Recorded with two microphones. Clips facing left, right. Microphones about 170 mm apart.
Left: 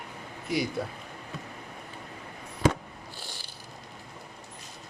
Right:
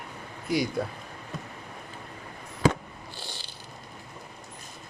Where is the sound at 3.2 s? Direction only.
70° right (ahead or behind).